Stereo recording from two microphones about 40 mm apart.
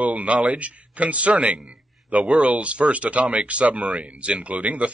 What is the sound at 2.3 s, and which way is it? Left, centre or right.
A man's voice, right.